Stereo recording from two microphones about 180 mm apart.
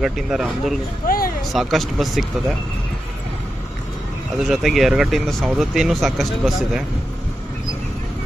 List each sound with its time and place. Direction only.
0.0 s speech: centre (ahead or behind)
1.0 s a sound: 55° left (ahead or behind)
1.5 s speech: centre (ahead or behind)
4.5 s speech: centre (ahead or behind)